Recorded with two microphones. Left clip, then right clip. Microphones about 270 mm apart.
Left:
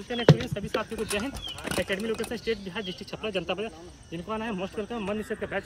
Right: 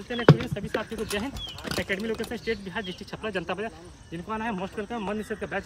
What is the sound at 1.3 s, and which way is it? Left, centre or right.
Speech, left.